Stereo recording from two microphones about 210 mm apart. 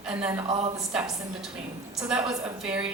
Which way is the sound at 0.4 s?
30° right (ahead or behind).